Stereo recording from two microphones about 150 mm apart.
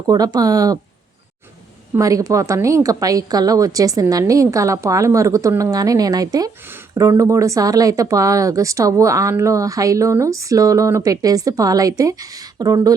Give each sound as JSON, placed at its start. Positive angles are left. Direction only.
{"t": 0.1, "sound": "a woman's voice", "side_deg": -25}
{"t": 2.0, "sound": "a woman's voice", "side_deg": -20}